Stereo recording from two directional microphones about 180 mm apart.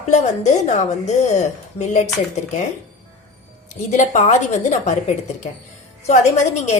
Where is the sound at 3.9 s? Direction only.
40° left (ahead or behind).